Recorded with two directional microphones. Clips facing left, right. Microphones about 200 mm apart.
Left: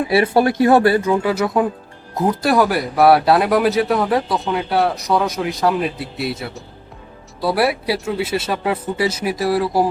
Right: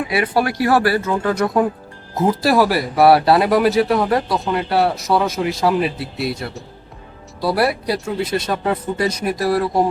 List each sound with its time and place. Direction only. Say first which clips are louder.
0.1 s speech: left 5 dB; 25° left (ahead or behind); by 9.9 s centre (ahead or behind)